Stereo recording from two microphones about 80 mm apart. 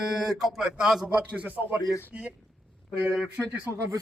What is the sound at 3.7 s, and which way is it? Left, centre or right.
Speech, left.